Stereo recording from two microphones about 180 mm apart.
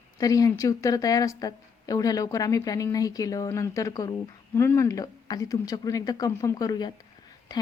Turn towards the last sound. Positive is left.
turn(degrees=20)  # may be behind; listen again after turning